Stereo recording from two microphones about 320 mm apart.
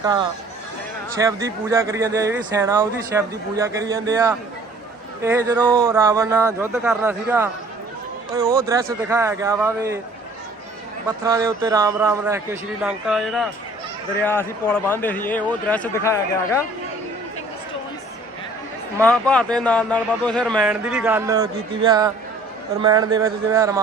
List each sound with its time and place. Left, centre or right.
0.0 s speech: centre
11.3 s a man's voice: centre
19.0 s a man's voice: centre
22.8 s speech: centre